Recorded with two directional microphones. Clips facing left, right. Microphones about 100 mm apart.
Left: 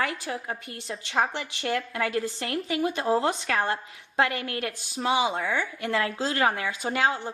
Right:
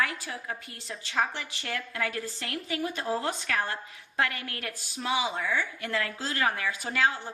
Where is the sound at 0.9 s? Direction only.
35° left (ahead or behind).